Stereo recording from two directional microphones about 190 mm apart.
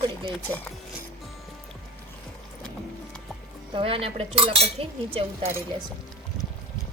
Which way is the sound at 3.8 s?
30° right (ahead or behind).